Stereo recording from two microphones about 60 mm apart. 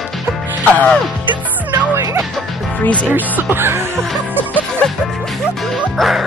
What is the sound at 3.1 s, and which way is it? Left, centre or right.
Speech, right.